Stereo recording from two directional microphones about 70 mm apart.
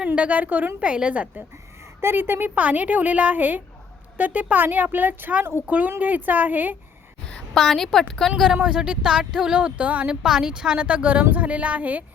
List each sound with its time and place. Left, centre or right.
0.2 s speech: right
2.0 s a woman's voice: right
7.5 s a woman's voice: centre
8.6 s speech: centre
10.2 s speech: centre